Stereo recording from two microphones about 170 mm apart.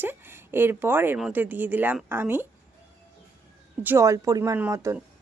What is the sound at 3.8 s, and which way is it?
Speech, 20° right (ahead or behind).